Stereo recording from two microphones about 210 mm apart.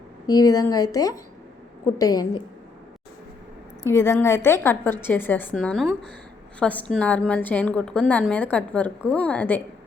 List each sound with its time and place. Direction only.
0.3 s a woman's voice: 15° left (ahead or behind)
3.8 s a woman's voice: 10° left (ahead or behind)